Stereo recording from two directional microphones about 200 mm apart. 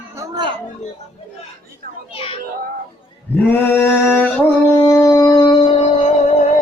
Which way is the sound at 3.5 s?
10° left (ahead or behind).